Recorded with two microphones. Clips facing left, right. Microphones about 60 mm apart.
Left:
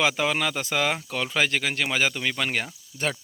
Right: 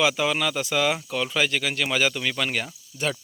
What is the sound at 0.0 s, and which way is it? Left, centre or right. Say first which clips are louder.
Speech: right 1 dB; left.